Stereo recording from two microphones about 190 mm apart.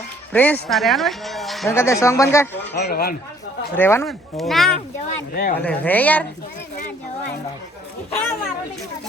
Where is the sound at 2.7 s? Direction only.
60° left (ahead or behind).